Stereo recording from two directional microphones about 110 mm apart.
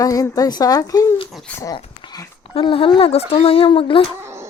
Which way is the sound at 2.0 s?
35° left (ahead or behind).